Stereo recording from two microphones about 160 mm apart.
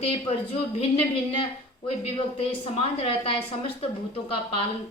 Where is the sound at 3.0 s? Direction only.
35° left (ahead or behind).